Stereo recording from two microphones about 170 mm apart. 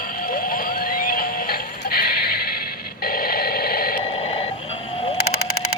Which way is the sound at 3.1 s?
60° left (ahead or behind).